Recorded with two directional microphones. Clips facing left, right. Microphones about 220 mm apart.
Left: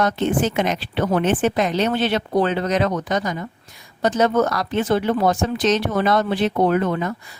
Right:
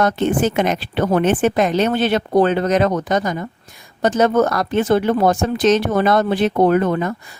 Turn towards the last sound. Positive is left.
turn(degrees=-45)  # may be behind; listen again after turning